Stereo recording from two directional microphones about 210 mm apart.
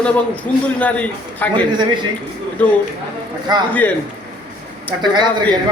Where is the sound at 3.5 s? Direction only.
20° right (ahead or behind).